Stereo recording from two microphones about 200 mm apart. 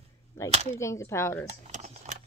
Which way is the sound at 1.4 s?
35° right (ahead or behind).